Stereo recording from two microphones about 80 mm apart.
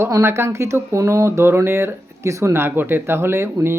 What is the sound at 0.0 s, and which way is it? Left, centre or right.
Speech, right.